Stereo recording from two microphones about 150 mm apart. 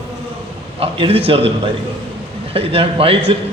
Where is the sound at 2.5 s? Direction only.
40° right (ahead or behind).